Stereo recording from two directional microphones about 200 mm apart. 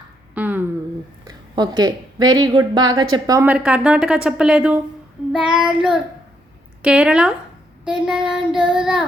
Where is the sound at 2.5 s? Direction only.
20° right (ahead or behind).